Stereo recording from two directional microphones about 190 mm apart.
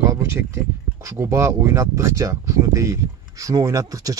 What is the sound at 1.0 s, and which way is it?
Speech, 15° right (ahead or behind).